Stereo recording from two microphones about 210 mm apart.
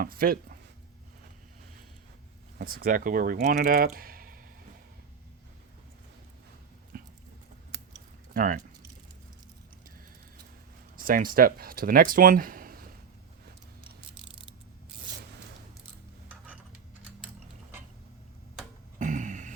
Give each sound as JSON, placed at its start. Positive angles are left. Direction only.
{"t": 0.0, "sound": "speech", "side_deg": -45}
{"t": 2.6, "sound": "speech", "side_deg": -45}
{"t": 6.9, "sound": "a sound", "side_deg": -45}
{"t": 8.3, "sound": "speech", "side_deg": -40}
{"t": 10.9, "sound": "speech", "side_deg": -40}
{"t": 18.9, "sound": "a sound", "side_deg": -35}